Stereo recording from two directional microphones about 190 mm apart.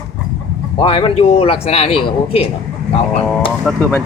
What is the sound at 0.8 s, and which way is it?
A man's voice, 25° left (ahead or behind).